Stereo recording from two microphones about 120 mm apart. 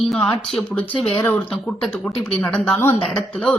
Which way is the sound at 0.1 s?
5° left (ahead or behind).